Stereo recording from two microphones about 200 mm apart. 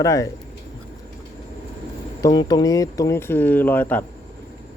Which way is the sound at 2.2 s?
20° left (ahead or behind).